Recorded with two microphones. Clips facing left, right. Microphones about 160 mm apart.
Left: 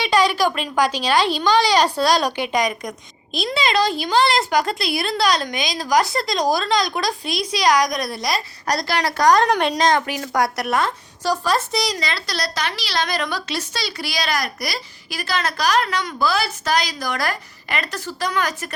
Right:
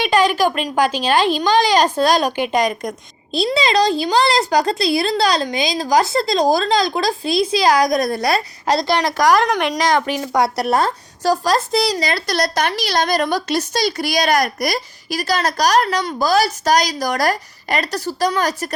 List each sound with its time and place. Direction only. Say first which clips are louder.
0.3 s a child's voice: right 3 dB; 15° right (ahead or behind)
1.5 s a woman's voice: right 2 dB; 45° right (ahead or behind)
1.8 s a child's voice: right 2 dB; 15° right (ahead or behind)
3.3 s a woman's voice: right 4 dB; 30° right (ahead or behind)
8.0 s a woman's voice: right 6 dB; 55° right (ahead or behind)
8.6 s a woman's voice: right 4 dB; 25° right (ahead or behind)
9.5 s a woman's voice: even; 30° left (ahead or behind)
10.1 s speech: right 3 dB; 25° right (ahead or behind)